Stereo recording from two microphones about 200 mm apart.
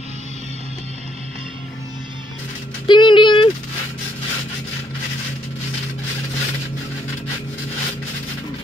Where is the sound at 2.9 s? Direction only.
25° left (ahead or behind).